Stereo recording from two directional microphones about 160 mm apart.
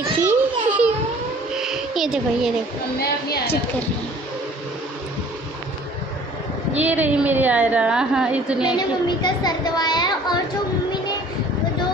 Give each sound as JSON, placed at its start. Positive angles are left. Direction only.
{"t": 0.2, "sound": "a sound", "side_deg": -10}
{"t": 6.8, "sound": "a woman's voice", "side_deg": -10}
{"t": 8.6, "sound": "speech", "side_deg": 25}